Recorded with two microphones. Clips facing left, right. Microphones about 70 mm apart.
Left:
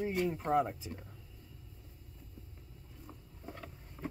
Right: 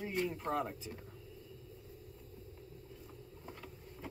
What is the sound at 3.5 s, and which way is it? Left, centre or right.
Vehicle, left.